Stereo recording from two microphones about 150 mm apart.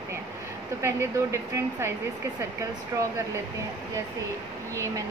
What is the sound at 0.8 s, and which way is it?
A woman's voice, 15° right (ahead or behind).